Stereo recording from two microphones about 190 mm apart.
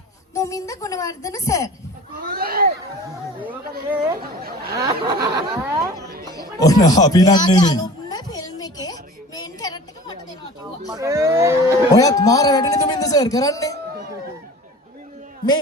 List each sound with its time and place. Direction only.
0.3 s a woman's voice: 15° left (ahead or behind)
2.3 s speech: 50° right (ahead or behind)
3.8 s speech: 50° right (ahead or behind)
4.8 s a sound: 20° right (ahead or behind)
6.3 s a sound: 20° left (ahead or behind)
10.9 s speech: 15° right (ahead or behind)
11.9 s a man's voice: 20° left (ahead or behind)